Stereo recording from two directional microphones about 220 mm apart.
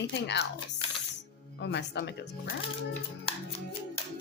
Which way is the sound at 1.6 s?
50° left (ahead or behind).